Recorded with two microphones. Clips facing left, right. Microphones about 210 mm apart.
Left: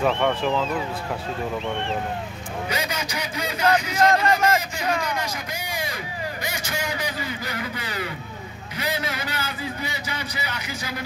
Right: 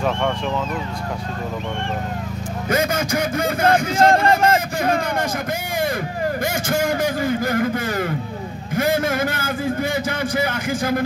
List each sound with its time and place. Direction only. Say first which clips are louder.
2.7 s speech: right 11 dB; 50° right (ahead or behind)